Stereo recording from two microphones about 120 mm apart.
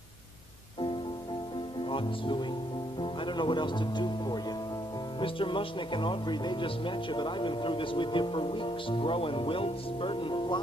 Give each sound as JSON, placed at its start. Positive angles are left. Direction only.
{"t": 1.9, "sound": "speech", "side_deg": 45}